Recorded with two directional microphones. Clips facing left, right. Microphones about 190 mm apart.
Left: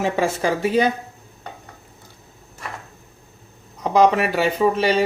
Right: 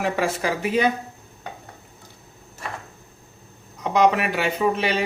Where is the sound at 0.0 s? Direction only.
30° left (ahead or behind).